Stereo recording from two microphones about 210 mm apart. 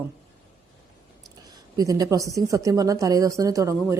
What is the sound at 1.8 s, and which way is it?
A woman's voice, 15° right (ahead or behind).